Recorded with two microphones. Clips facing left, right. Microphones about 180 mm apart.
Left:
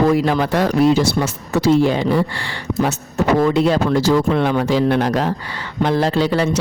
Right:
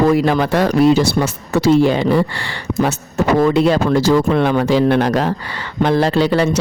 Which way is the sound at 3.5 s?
70° right (ahead or behind).